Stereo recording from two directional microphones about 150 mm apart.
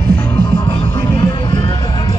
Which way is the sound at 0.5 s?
30° left (ahead or behind).